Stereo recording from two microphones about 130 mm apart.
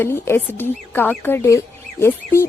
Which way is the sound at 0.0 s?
20° left (ahead or behind).